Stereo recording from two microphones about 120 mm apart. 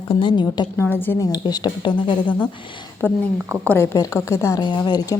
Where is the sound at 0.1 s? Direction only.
40° left (ahead or behind).